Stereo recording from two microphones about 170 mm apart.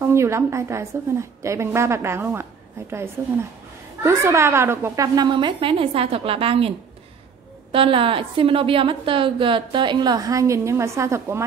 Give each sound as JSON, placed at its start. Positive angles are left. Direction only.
{"t": 0.0, "sound": "a woman's voice", "side_deg": -15}
{"t": 7.7, "sound": "a woman's voice", "side_deg": -30}